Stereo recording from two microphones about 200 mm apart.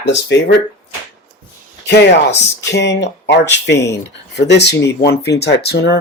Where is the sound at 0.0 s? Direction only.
60° left (ahead or behind).